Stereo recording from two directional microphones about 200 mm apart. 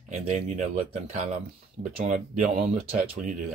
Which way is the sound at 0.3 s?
35° right (ahead or behind).